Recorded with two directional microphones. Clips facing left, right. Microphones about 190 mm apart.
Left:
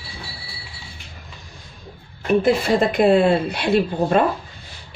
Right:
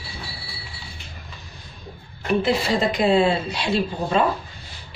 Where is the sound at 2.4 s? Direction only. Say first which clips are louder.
Left 4 dB; 50° left (ahead or behind).